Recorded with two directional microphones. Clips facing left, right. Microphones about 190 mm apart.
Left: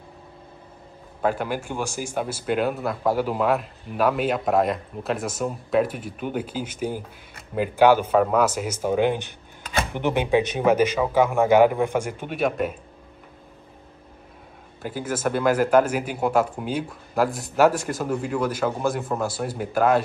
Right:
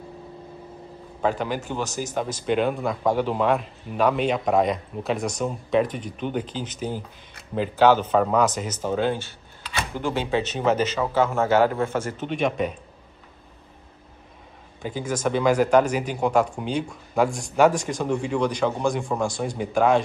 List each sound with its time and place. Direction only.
1.2 s a man's voice: 10° left (ahead or behind)
9.6 s a sound: 50° left (ahead or behind)
9.9 s a man's voice: 20° left (ahead or behind)
14.8 s speech: 5° left (ahead or behind)